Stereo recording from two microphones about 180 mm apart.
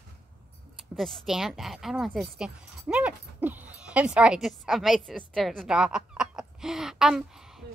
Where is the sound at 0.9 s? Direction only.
Centre (ahead or behind).